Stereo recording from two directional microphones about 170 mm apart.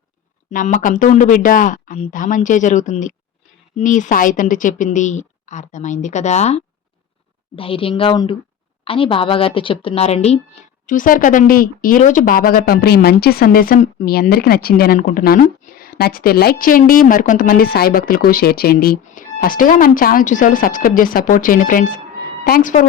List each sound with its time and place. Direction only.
0.5 s a woman's voice: 50° left (ahead or behind)
10.8 s a woman's voice: 50° left (ahead or behind)